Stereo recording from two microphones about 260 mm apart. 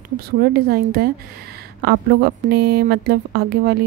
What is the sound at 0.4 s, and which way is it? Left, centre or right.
A woman's voice, right.